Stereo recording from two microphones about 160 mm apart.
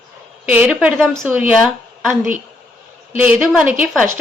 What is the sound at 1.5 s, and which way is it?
A woman's voice, centre (ahead or behind).